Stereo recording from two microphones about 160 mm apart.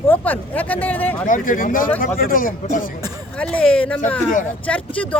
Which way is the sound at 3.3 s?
10° left (ahead or behind).